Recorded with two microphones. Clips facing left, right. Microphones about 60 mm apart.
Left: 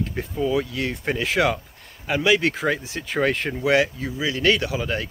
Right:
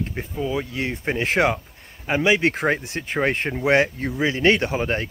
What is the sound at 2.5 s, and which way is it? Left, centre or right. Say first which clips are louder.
Speech: right 2 dB; right.